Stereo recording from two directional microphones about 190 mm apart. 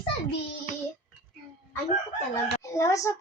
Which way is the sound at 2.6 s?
15° left (ahead or behind).